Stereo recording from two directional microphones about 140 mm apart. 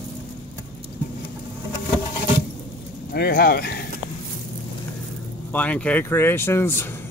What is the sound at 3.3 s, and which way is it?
Speech, 90° left.